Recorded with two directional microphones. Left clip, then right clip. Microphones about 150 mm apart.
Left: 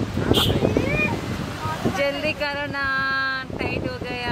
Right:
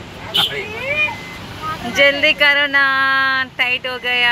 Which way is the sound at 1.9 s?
20° right (ahead or behind).